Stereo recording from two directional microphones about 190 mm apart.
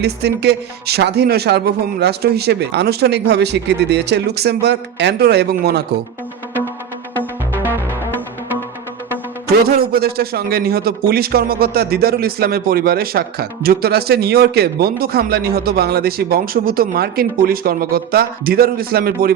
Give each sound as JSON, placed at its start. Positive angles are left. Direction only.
{"t": 0.0, "sound": "speech", "side_deg": -60}
{"t": 7.2, "sound": "music", "side_deg": -10}
{"t": 9.6, "sound": "speech", "side_deg": -50}